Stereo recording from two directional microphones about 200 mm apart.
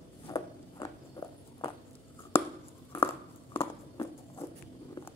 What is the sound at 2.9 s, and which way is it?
Biting, 25° left (ahead or behind).